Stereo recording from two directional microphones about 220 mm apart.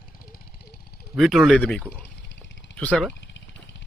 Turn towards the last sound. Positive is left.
turn(degrees=5)  # may be behind; listen again after turning